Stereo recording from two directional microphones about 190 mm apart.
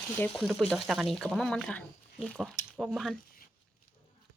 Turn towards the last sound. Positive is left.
turn(degrees=-5)  # may be behind; listen again after turning